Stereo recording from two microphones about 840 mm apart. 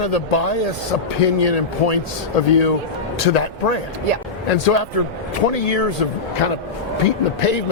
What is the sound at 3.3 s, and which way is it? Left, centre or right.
A man's voice, left.